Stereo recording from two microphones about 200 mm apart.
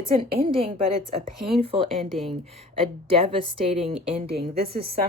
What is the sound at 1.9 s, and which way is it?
Speech, centre (ahead or behind).